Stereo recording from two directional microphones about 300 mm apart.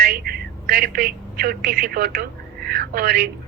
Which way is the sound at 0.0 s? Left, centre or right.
Right.